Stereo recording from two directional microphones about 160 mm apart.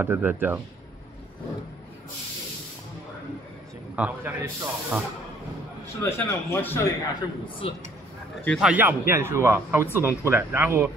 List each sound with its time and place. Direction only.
0.0 s a man's voice: 10° right (ahead or behind)
3.9 s a man's voice: 10° right (ahead or behind)
5.9 s a man's voice: 15° left (ahead or behind)
7.2 s a man's voice: 30° left (ahead or behind)
8.5 s a man's voice: 5° right (ahead or behind)